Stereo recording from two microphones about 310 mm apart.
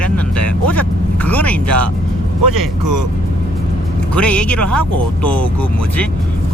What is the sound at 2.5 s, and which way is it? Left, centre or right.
Speech, right.